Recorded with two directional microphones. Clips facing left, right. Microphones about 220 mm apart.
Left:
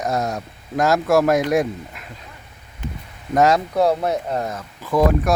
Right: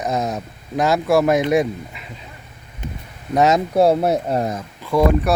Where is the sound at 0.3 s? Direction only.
Centre (ahead or behind).